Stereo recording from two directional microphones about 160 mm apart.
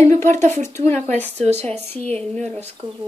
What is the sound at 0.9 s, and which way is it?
Speech, 45° right (ahead or behind).